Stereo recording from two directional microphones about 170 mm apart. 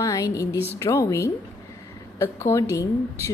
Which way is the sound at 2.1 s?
15° left (ahead or behind).